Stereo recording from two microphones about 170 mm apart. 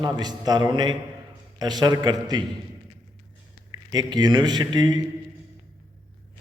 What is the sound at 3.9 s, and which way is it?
A man's voice, 25° right (ahead or behind).